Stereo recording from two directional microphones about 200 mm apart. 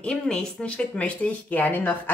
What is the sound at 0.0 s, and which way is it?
Speech, 5° left (ahead or behind).